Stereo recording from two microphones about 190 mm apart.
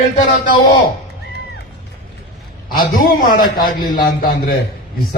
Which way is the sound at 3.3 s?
50° left (ahead or behind).